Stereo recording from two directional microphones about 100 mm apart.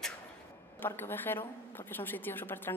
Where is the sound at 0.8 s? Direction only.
20° left (ahead or behind).